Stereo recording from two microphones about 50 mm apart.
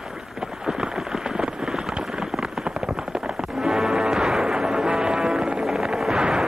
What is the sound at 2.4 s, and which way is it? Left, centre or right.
Music, centre.